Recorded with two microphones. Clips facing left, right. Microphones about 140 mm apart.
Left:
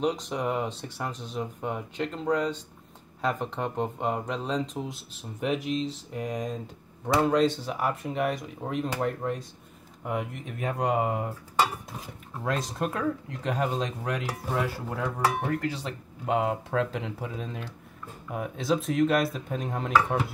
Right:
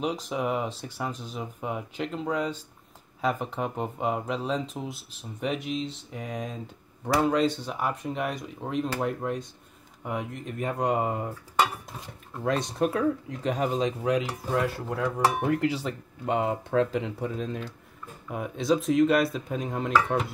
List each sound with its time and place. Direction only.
0.0 s speech: centre (ahead or behind)
12.4 s speech: centre (ahead or behind)
15.2 s speech: 20° right (ahead or behind)
15.7 s speech: centre (ahead or behind)